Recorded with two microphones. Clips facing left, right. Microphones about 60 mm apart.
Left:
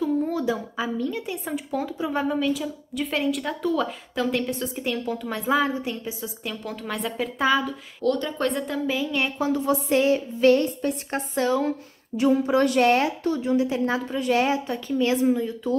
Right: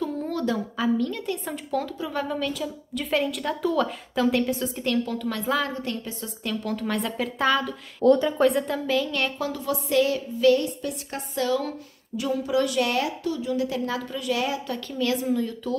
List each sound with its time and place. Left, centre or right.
0.0 s a woman's voice: centre
4.8 s a woman's voice: centre
8.9 s a woman's voice: centre
9.5 s a woman's voice: left